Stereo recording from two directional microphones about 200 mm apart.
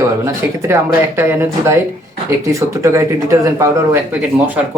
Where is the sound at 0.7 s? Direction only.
10° right (ahead or behind).